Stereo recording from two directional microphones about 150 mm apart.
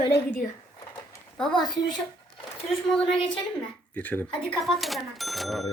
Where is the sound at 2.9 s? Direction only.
5° left (ahead or behind).